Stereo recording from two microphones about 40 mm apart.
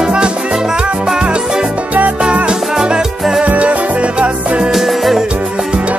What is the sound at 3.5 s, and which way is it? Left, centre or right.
Music, right.